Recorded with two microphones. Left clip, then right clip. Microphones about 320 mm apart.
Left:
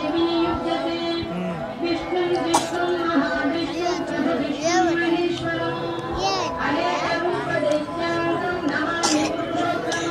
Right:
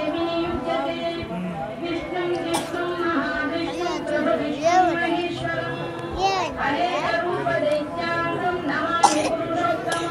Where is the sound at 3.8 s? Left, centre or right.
Centre.